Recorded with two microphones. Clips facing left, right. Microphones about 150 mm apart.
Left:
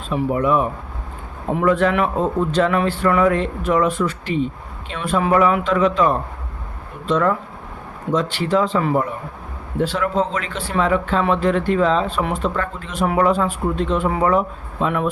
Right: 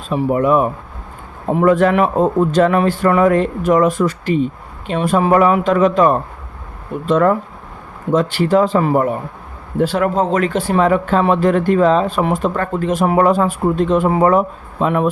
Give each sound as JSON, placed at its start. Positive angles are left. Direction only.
{"t": 0.1, "sound": "speech", "side_deg": -45}